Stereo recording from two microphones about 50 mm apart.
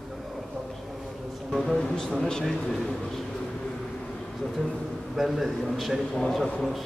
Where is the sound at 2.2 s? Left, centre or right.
Centre.